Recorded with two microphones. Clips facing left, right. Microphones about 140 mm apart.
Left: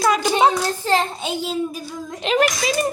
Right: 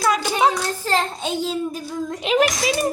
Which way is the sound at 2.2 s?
5° right (ahead or behind).